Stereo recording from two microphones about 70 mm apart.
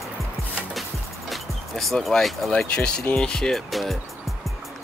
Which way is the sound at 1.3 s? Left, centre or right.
Centre.